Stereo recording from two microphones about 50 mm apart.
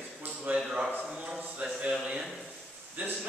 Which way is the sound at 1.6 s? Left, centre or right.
Right.